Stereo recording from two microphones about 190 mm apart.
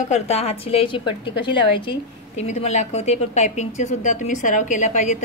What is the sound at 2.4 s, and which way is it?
Speech, 35° left (ahead or behind).